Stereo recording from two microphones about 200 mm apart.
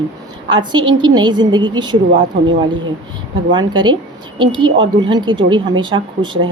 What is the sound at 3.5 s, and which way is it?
A woman's voice, 20° right (ahead or behind).